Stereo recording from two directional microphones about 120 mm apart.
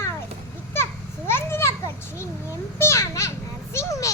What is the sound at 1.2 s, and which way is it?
Children playing, 20° left (ahead or behind).